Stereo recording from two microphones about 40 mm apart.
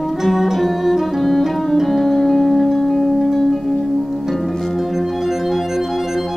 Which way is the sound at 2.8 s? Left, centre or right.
Centre.